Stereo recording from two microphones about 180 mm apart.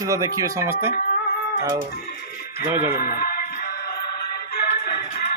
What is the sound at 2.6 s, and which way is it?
Speech, 10° right (ahead or behind).